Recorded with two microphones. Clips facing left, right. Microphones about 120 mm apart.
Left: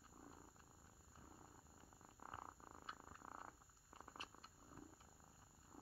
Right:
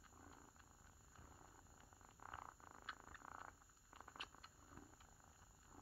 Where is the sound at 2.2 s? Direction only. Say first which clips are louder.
Left 1 dB; 30° left (ahead or behind).